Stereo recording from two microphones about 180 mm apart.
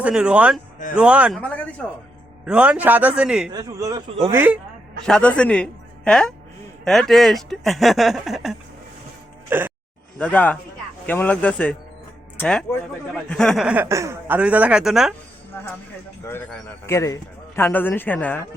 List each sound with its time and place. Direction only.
0.0 s speech: 5° right (ahead or behind)
1.4 s speech: 10° left (ahead or behind)
2.4 s speech: 5° right (ahead or behind)
3.5 s a man's voice: 20° right (ahead or behind)
5.0 s speech: 5° left (ahead or behind); by 9.7 s 10° right (ahead or behind)
10.2 s a man's voice: 5° left (ahead or behind)
15.5 s a man's voice: 10° left (ahead or behind)